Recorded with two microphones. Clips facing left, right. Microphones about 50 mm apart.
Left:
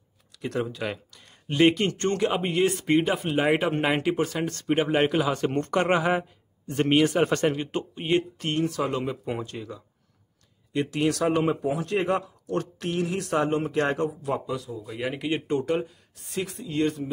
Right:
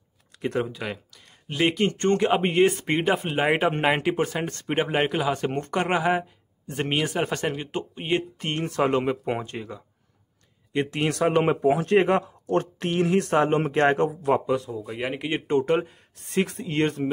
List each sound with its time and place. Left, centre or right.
0.6 s speech: centre
1.9 s speech: right
3.3 s speech: centre
4.8 s speech: centre
8.5 s speech: right
11.7 s speech: right
13.3 s speech: right
15.6 s speech: right